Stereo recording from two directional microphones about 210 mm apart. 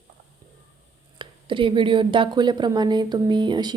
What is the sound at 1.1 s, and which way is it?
A woman's voice, 25° right (ahead or behind).